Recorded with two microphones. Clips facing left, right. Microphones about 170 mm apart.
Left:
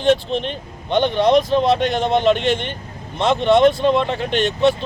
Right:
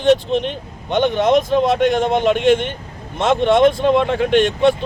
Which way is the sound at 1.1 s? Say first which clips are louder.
Left 1 dB; 50° right (ahead or behind).